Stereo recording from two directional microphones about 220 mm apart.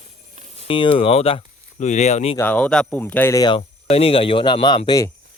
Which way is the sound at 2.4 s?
5° left (ahead or behind).